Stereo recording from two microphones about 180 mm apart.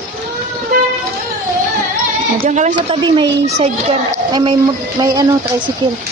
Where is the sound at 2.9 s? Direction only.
25° right (ahead or behind).